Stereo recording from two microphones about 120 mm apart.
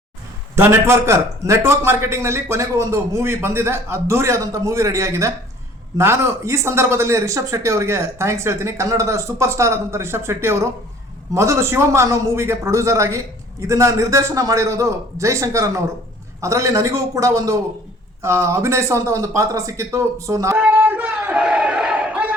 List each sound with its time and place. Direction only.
0.5 s speech: 20° right (ahead or behind)
20.6 s crowd: 15° right (ahead or behind)